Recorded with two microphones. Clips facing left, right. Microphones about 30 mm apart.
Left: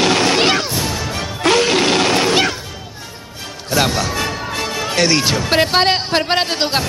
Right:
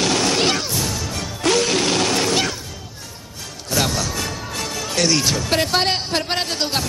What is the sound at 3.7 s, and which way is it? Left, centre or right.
Music, left.